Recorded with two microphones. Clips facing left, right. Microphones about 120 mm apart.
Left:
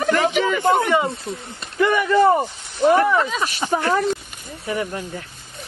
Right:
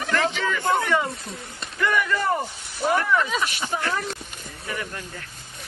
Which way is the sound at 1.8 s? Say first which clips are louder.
Left 8 dB; 20° left (ahead or behind).